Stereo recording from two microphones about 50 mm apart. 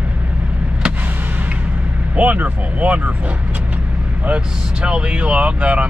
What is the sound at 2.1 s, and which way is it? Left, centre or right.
Speech, right.